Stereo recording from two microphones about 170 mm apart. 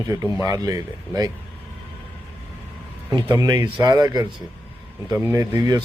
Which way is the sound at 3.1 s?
25° right (ahead or behind).